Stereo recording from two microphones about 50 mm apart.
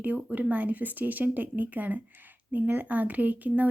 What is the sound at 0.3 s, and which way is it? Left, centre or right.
Speech, right.